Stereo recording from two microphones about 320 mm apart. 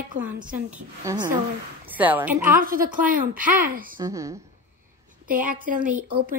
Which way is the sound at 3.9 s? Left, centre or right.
Centre.